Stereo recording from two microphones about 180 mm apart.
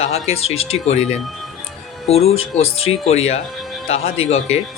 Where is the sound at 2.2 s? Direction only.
35° left (ahead or behind).